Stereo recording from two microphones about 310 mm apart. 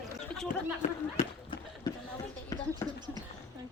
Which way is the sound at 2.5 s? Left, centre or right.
Centre.